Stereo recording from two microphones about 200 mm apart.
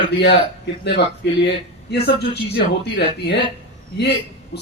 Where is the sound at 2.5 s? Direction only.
55° left (ahead or behind).